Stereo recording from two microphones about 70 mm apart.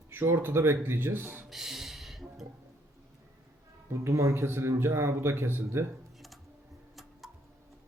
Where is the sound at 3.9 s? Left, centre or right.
Right.